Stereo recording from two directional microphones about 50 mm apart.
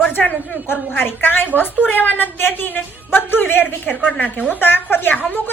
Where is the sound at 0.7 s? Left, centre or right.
Left.